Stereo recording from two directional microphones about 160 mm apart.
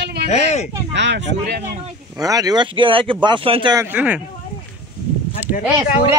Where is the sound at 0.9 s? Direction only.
90° right.